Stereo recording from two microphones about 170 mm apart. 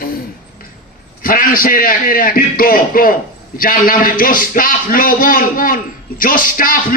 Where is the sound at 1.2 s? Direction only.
55° left (ahead or behind).